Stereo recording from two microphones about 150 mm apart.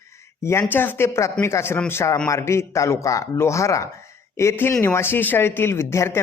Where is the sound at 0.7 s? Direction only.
15° left (ahead or behind).